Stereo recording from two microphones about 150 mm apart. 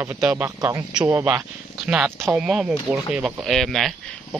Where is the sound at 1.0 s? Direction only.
15° right (ahead or behind).